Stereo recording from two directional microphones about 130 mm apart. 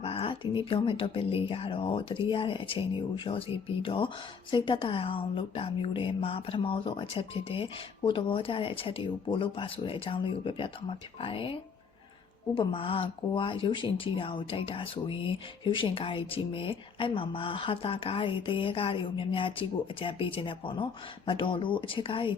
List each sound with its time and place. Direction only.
0.0 s a sound: 50° left (ahead or behind)
0.6 s speech: 45° left (ahead or behind)
12.5 s speech: 45° left (ahead or behind)